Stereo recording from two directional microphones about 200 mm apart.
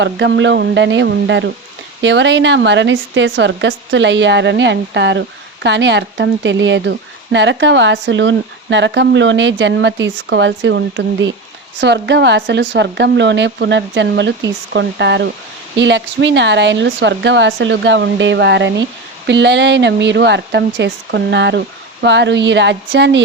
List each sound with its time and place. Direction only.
0.0 s speech: 60° right (ahead or behind)